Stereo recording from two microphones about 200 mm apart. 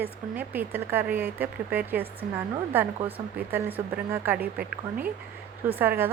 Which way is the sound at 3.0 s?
25° right (ahead or behind).